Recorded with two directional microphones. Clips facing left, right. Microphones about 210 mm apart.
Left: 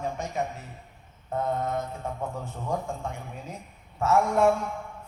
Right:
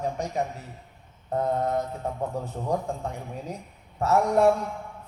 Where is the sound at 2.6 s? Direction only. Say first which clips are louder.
Right 2 dB; 35° right (ahead or behind).